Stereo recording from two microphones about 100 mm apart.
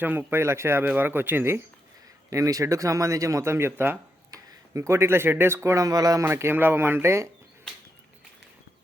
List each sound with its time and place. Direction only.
0.0 s speech: 20° right (ahead or behind)
2.3 s speech: 35° right (ahead or behind)
6.2 s speech: 25° right (ahead or behind)